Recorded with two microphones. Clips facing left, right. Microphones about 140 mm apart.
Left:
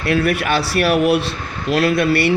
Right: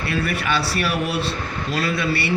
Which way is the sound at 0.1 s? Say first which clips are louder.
Left 7 dB; 70° left (ahead or behind).